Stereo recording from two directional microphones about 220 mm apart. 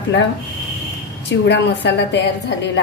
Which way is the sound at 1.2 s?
50° left (ahead or behind).